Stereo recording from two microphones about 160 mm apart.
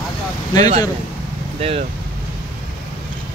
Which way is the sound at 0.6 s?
40° right (ahead or behind).